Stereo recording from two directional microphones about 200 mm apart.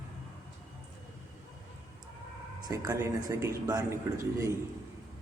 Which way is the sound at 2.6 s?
20° right (ahead or behind).